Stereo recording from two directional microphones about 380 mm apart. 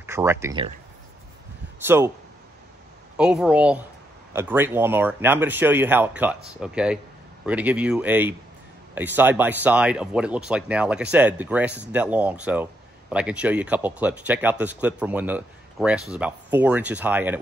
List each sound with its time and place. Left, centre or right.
0.0 s speech: centre
1.9 s speech: centre
3.2 s speech: centre